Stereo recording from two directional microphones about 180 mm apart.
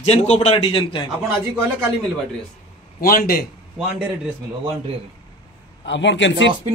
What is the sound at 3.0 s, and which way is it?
Speech, 55° left (ahead or behind).